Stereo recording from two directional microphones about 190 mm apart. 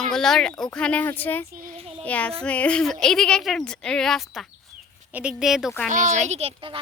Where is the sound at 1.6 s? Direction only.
40° right (ahead or behind).